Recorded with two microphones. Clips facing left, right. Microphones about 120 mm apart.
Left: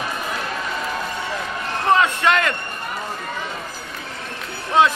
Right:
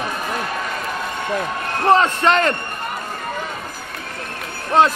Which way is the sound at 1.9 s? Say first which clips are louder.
Right 2 dB; 35° right (ahead or behind).